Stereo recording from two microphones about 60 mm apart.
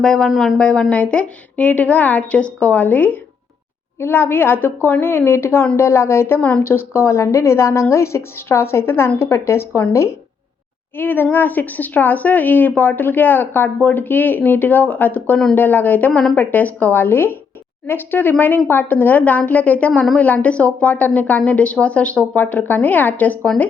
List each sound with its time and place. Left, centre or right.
0.0 s speech: centre
0.3 s speech: centre
0.6 s a woman's voice: centre; by 10.2 s left
10.9 s a woman's voice: left